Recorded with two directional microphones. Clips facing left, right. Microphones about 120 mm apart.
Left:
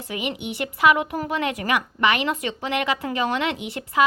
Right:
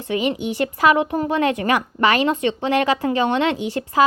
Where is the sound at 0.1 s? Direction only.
30° right (ahead or behind).